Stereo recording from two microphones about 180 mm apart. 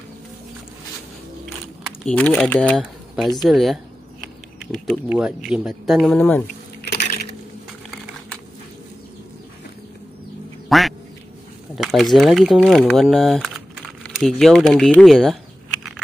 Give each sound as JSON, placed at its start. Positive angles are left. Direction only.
{"t": 2.0, "sound": "speech", "side_deg": 5}
{"t": 4.6, "sound": "a sound", "side_deg": 5}
{"t": 5.1, "sound": "speech", "side_deg": -5}
{"t": 6.8, "sound": "coin", "side_deg": 65}
{"t": 10.7, "sound": "quack", "side_deg": 0}
{"t": 11.7, "sound": "speech", "side_deg": 0}